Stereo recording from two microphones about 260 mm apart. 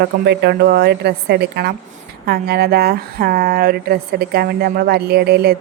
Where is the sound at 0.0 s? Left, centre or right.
Right.